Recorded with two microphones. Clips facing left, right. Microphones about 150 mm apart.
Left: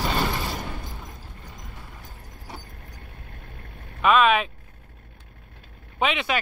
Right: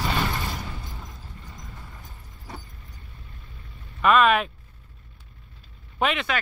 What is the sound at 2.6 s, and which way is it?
Vehicle, 65° left (ahead or behind).